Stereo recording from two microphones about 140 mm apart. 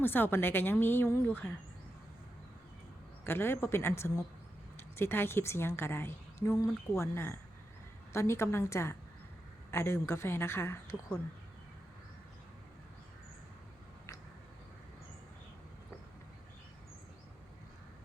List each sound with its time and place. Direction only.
0.0 s a woman's voice: 15° left (ahead or behind)
3.2 s a woman's voice: 15° left (ahead or behind)